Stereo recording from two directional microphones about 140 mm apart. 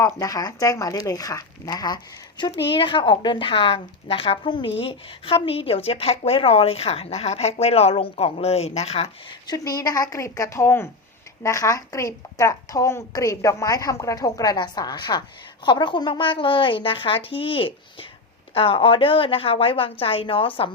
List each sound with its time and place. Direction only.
0.2 s a woman's voice: 25° left (ahead or behind); by 9.0 s 45° left (ahead or behind)
9.5 s a woman's voice: 25° left (ahead or behind)